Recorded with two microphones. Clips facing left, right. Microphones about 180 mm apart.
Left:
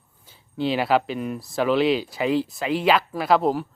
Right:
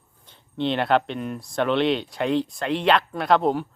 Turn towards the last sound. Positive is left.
turn(degrees=0)  # may be behind; listen again after turning